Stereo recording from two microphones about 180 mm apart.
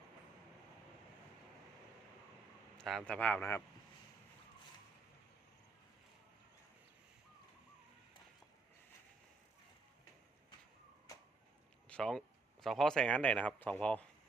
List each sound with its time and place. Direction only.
2.7 s a sound: centre (ahead or behind)
3.1 s speech: 10° left (ahead or behind)
11.9 s speech: 5° left (ahead or behind)